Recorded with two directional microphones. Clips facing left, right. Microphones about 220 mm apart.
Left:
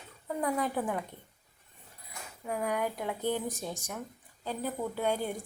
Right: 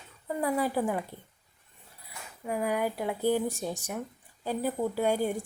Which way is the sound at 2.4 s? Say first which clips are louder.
Right 3 dB; 5° right (ahead or behind).